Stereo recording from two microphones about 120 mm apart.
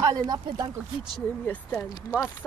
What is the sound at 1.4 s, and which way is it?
Speech, 10° left (ahead or behind).